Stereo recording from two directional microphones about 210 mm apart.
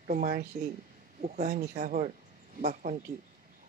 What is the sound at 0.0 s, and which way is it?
Speech, 40° right (ahead or behind).